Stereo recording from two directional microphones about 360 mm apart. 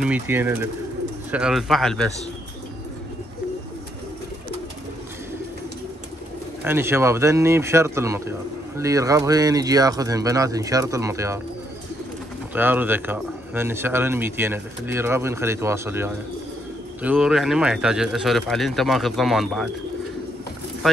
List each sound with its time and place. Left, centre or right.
0.0 s speech: centre
6.6 s a man's voice: centre
12.5 s a man's voice: centre
20.8 s speech: centre